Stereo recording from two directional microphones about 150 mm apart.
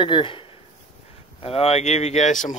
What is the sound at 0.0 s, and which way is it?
Speech, 35° left (ahead or behind).